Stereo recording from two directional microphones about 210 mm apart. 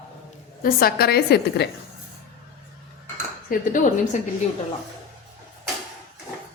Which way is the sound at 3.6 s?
40° left (ahead or behind).